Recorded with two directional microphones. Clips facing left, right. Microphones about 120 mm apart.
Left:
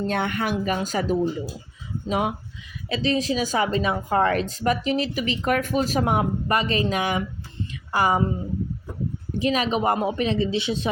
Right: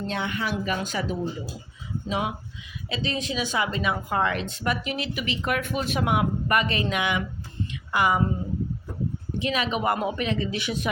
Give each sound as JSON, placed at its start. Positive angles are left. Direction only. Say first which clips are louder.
{"t": 0.1, "sound": "speech", "louder": "left 4 dB", "side_deg": 55}
{"t": 0.6, "sound": "speech", "louder": "left 3 dB", "side_deg": 40}
{"t": 7.7, "sound": "a sound", "louder": "left 2 dB", "side_deg": 35}
{"t": 9.4, "sound": "speech", "louder": "left 4 dB", "side_deg": 35}